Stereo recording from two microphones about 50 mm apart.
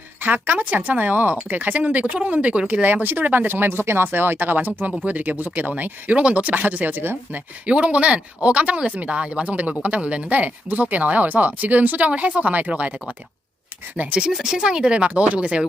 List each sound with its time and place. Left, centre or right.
0.2 s speech: right
1.8 s speech: right
2.8 s speech: right
7.7 s speech: right
14.3 s speech: centre